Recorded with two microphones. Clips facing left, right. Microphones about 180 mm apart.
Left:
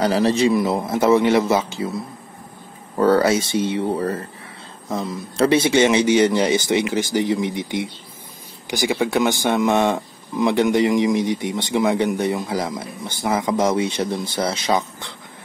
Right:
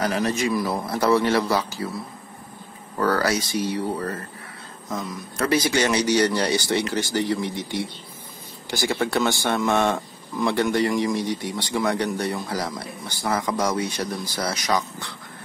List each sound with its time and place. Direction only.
0.0 s speech: 30° left (ahead or behind)
3.0 s speech: 25° left (ahead or behind)